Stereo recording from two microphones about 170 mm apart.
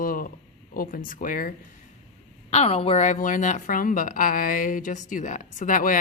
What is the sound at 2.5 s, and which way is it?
A woman's voice, 35° left (ahead or behind).